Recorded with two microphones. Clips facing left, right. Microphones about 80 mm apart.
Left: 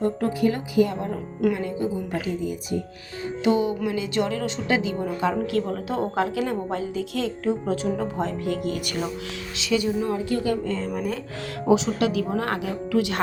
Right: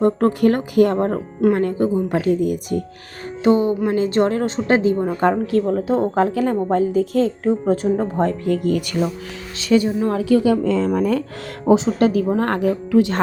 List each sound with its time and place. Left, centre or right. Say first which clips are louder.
0.0 s speech: right 7 dB; right
3.4 s a woman's voice: right 6 dB; right
10.1 s a woman's voice: right 8 dB; right
11.7 s a woman's voice: right 6 dB; right
12.9 s speech: right 6 dB; right